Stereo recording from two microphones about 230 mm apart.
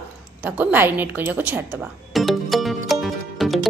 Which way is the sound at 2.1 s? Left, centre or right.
Centre.